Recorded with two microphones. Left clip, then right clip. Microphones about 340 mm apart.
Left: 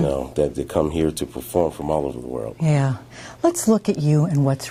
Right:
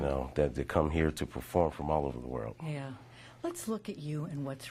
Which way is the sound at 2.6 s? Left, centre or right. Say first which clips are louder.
Left 19 dB; left.